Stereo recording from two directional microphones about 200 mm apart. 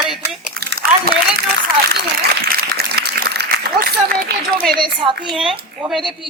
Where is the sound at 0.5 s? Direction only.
50° right (ahead or behind).